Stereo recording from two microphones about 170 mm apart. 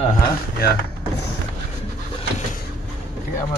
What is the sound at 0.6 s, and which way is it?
Speech, 65° left (ahead or behind).